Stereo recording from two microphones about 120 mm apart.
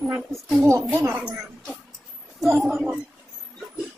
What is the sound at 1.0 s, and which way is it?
Speech, 5° right (ahead or behind).